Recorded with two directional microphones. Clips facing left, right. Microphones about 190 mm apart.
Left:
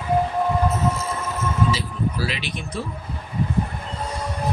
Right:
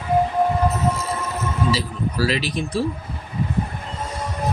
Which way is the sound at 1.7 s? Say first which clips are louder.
Right 2 dB; 40° right (ahead or behind).